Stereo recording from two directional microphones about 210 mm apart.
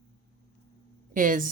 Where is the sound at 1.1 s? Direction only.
40° right (ahead or behind).